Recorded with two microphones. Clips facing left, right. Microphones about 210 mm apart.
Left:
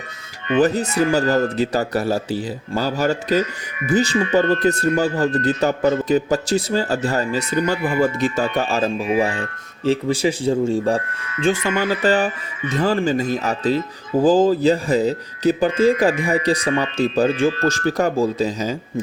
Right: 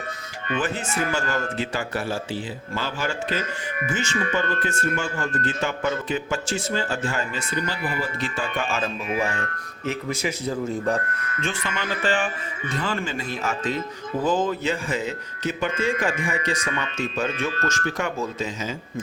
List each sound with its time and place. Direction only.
0.6 s speech: 40° left (ahead or behind)
11.1 s speech: 55° right (ahead or behind)
11.6 s speech: 40° left (ahead or behind)